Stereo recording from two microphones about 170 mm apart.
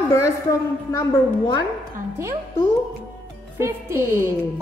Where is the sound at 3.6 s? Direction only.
15° right (ahead or behind).